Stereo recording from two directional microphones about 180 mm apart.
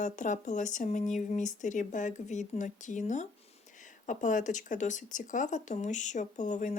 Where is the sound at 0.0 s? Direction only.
45° left (ahead or behind).